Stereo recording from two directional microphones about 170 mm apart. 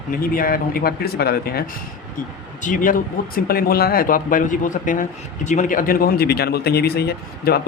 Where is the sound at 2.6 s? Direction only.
50° left (ahead or behind).